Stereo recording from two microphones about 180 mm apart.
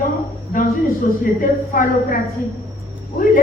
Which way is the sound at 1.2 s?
50° left (ahead or behind).